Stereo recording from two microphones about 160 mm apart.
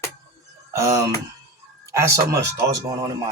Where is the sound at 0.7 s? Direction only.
20° right (ahead or behind).